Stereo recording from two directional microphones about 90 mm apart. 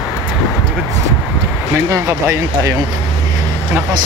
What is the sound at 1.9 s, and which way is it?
Speech, 35° right (ahead or behind).